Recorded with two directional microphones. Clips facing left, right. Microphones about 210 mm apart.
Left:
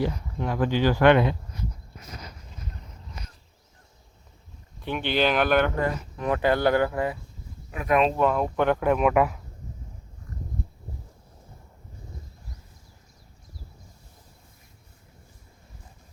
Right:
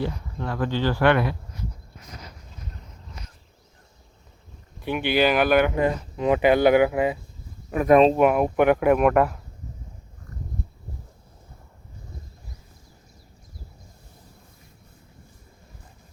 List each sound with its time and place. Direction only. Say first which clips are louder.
0.0 s speech: left 1 dB; 15° left (ahead or behind)
4.9 s speech: right 3 dB; 10° right (ahead or behind)
7.7 s speech: right 8 dB; 45° right (ahead or behind)
7.9 s speech: right 6 dB; 30° right (ahead or behind)
8.2 s speech: right 4 dB; 15° right (ahead or behind); by 9.4 s 5° left (ahead or behind)